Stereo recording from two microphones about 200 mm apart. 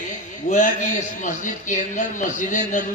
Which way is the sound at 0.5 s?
40° left (ahead or behind).